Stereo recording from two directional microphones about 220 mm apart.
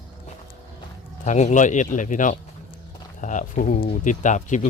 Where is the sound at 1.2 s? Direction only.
30° left (ahead or behind).